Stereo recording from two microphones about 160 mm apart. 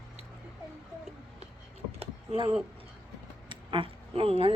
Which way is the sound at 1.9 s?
35° right (ahead or behind).